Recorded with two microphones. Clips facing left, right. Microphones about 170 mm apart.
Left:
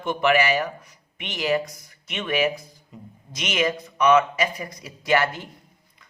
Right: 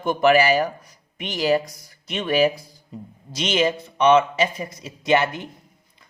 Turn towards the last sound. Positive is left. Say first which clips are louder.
# right 2 dB
turn(degrees=-20)  # may be behind; listen again after turning